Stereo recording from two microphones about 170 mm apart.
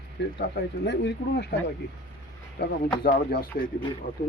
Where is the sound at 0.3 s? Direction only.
90° left.